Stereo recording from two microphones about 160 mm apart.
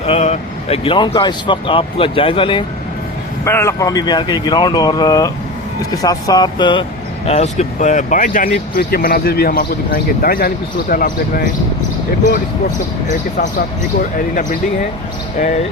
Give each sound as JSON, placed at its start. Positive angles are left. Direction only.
{"t": 0.0, "sound": "speech", "side_deg": 40}
{"t": 3.4, "sound": "speech", "side_deg": 15}
{"t": 7.3, "sound": "speech", "side_deg": 45}
{"t": 15.4, "sound": "speech", "side_deg": 50}